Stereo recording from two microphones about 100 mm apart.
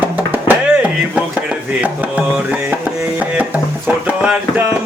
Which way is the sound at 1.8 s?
10° right (ahead or behind).